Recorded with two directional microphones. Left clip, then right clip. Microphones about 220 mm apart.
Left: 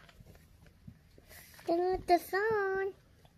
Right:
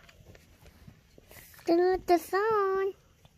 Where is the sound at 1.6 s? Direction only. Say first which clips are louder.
Right 6 dB; 35° right (ahead or behind).